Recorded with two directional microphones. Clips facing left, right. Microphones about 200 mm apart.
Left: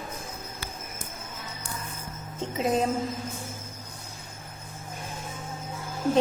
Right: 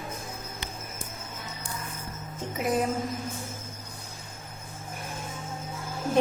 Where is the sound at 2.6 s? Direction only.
25° left (ahead or behind).